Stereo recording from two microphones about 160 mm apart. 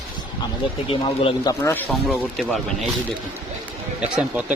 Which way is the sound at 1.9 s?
Centre (ahead or behind).